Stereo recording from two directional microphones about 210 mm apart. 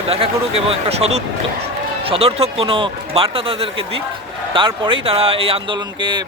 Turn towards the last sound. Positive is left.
turn(degrees=-25)  # may be behind; listen again after turning